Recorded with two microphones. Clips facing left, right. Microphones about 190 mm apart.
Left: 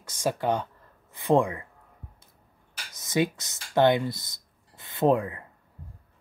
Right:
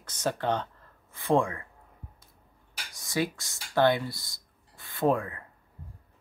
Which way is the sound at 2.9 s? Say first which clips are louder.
Left 4 dB; 20° left (ahead or behind).